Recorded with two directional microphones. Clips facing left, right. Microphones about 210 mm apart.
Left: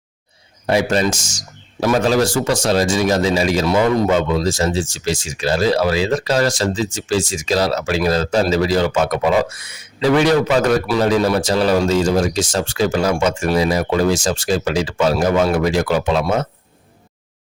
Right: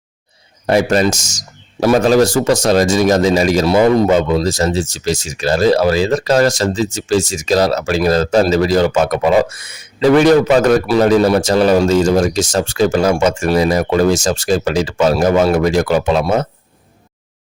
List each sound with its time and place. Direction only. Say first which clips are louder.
0.7 s a man's voice: right 4 dB; 45° right (ahead or behind)